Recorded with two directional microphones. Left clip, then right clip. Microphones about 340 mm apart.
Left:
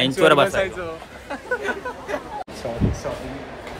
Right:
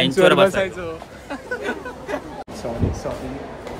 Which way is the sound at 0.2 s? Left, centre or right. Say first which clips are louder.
Right 1 dB; centre.